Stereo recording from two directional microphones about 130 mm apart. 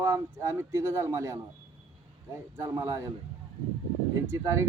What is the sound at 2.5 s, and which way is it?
Speech, 25° right (ahead or behind).